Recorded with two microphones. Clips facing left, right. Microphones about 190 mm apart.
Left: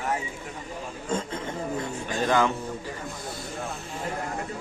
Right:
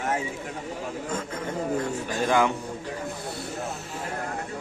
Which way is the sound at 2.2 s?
15° right (ahead or behind).